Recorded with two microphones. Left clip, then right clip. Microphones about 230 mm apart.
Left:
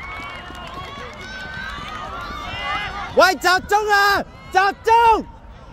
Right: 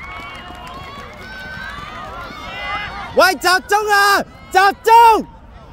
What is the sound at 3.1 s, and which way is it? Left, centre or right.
A man's voice, centre.